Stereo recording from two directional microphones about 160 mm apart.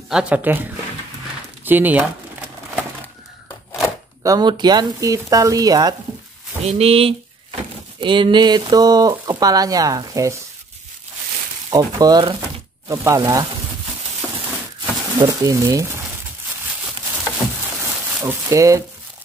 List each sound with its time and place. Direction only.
0.1 s speech: 5° right (ahead or behind)
1.6 s speech: 10° right (ahead or behind)
4.2 s speech: 25° right (ahead or behind)
6.6 s speech: 40° right (ahead or behind); by 10.3 s 20° right (ahead or behind)
11.7 s speech: 25° right (ahead or behind)
14.8 s crumpling: 25° right (ahead or behind)
18.2 s speech: 20° right (ahead or behind)